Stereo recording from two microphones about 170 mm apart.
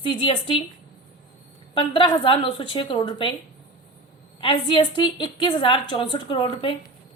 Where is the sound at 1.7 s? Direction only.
30° left (ahead or behind).